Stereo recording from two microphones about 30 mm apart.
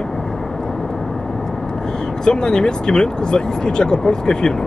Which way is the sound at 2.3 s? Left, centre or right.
Left.